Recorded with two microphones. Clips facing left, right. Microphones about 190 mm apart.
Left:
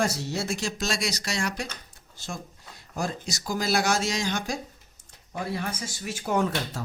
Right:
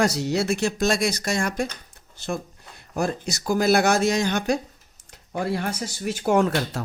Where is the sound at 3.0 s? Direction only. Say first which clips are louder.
Right 5 dB; 60° right (ahead or behind).